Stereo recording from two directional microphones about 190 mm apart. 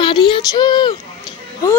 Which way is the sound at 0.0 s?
25° left (ahead or behind).